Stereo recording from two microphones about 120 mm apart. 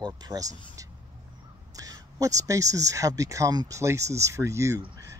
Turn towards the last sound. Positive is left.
turn(degrees=-25)  # may be behind; listen again after turning